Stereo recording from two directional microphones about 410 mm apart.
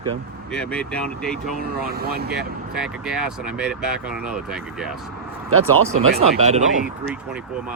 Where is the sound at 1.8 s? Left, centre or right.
Right.